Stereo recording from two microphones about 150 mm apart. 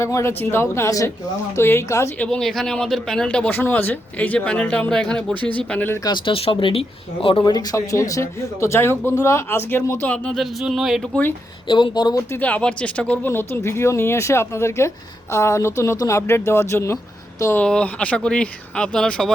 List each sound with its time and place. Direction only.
0.0 s speech: 20° left (ahead or behind)
2.2 s speech: 5° left (ahead or behind)
6.1 s speech: 35° left (ahead or behind); by 11.2 s centre (ahead or behind)
11.7 s speech: 30° left (ahead or behind)
12.3 s speech: 10° left (ahead or behind)